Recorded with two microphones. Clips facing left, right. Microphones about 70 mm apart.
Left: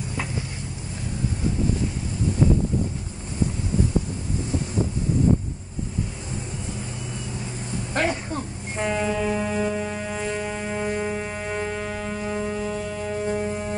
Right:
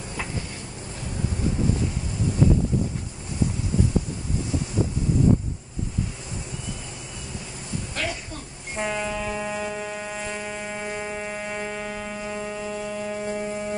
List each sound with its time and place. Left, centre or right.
7.9 s a sound: left
8.7 s train: centre
9.4 s music: centre